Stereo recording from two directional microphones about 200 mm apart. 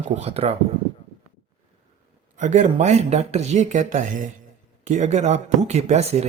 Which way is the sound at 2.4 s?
40° right (ahead or behind).